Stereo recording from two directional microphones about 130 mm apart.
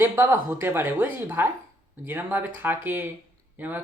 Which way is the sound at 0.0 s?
20° right (ahead or behind).